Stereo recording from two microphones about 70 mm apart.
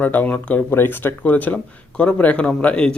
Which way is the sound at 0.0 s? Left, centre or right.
Left.